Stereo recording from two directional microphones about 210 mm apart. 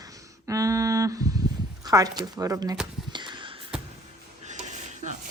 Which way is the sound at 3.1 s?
20° right (ahead or behind).